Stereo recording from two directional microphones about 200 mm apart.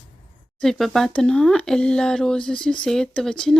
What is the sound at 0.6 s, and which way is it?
Speech, centre (ahead or behind).